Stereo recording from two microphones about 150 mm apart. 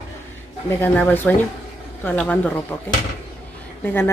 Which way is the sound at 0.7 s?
15° left (ahead or behind).